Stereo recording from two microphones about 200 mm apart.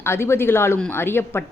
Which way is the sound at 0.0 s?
10° left (ahead or behind).